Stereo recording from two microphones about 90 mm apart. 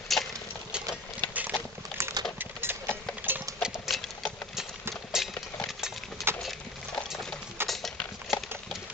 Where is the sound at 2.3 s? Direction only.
25° right (ahead or behind).